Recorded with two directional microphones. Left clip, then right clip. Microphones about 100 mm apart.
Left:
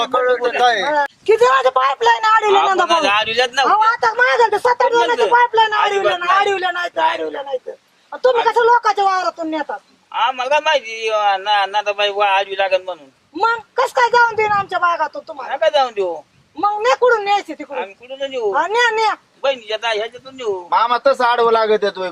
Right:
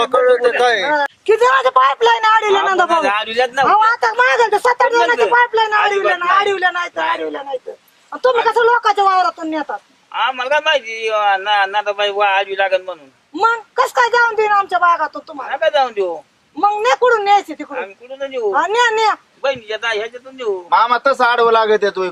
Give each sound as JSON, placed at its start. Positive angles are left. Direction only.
{"t": 0.0, "sound": "a man's voice", "side_deg": 0}
{"t": 2.8, "sound": "a man's voice", "side_deg": 25}
{"t": 3.7, "sound": "a man's voice", "side_deg": -15}
{"t": 6.9, "sound": "a man's voice", "side_deg": 10}
{"t": 7.2, "sound": "a man's voice", "side_deg": -5}
{"t": 10.2, "sound": "a man's voice", "side_deg": 10}
{"t": 13.3, "sound": "a man's voice", "side_deg": -15}
{"t": 15.4, "sound": "a man's voice", "side_deg": 10}
{"t": 16.6, "sound": "a man's voice", "side_deg": -10}
{"t": 17.7, "sound": "a man's voice", "side_deg": 15}
{"t": 18.5, "sound": "a man's voice", "side_deg": -15}
{"t": 19.4, "sound": "a man's voice", "side_deg": 10}
{"t": 20.7, "sound": "a man's voice", "side_deg": -15}